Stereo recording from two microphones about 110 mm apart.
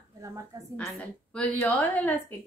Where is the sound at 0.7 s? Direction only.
10° left (ahead or behind).